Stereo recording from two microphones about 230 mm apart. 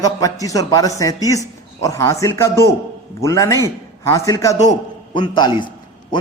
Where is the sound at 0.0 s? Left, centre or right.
Centre.